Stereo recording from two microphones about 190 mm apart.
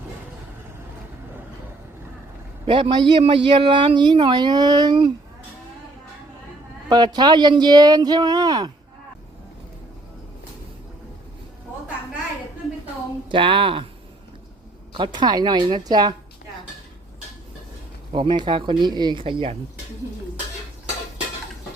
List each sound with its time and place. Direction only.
2.6 s speech: 25° right (ahead or behind)
6.8 s speech: 20° right (ahead or behind)
13.2 s speech: 25° right (ahead or behind)
14.9 s speech: 25° right (ahead or behind)
18.1 s speech: 25° right (ahead or behind)